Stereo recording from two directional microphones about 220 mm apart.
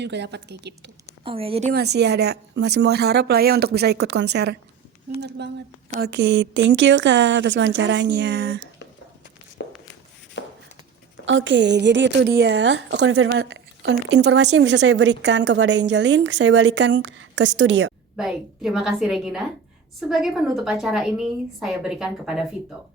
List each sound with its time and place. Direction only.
0.0 s a woman's voice: 50° right (ahead or behind)
1.2 s speech: 25° right (ahead or behind)
1.7 s a woman's voice: 50° right (ahead or behind)
5.9 s a woman's voice: 45° right (ahead or behind)
9.6 s walk: 50° left (ahead or behind)
10.4 s shuffle: 50° left (ahead or behind)
11.3 s a woman's voice: 55° right (ahead or behind)
18.2 s a woman's voice: centre (ahead or behind)